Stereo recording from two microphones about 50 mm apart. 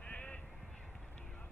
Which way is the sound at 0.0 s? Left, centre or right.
Left.